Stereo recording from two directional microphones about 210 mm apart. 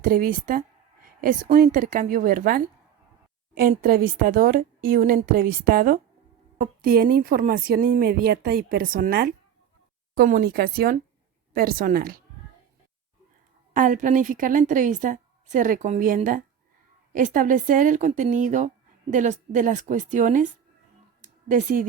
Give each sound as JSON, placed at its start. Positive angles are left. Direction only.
{"t": 0.0, "sound": "a woman's voice", "side_deg": -45}
{"t": 13.7, "sound": "a woman's voice", "side_deg": -40}
{"t": 21.2, "sound": "a sound", "side_deg": -40}